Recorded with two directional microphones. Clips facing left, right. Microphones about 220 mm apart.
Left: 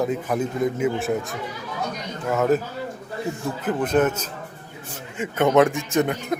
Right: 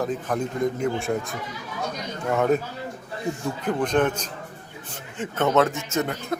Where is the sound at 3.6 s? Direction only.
5° left (ahead or behind).